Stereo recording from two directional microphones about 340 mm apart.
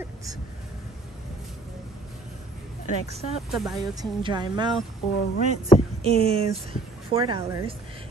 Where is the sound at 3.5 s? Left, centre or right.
Centre.